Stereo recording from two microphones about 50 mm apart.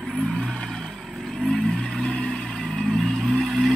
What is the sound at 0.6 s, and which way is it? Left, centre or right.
Vehicle, centre.